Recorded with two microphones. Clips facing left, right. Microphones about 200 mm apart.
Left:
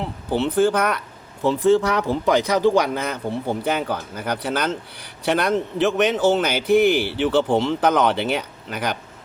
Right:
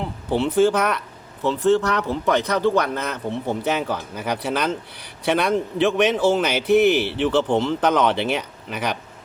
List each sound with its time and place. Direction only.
0.0 s speech: centre (ahead or behind)
1.4 s speech: 10° left (ahead or behind)